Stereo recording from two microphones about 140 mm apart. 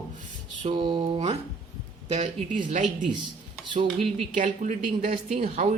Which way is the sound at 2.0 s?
50° right (ahead or behind).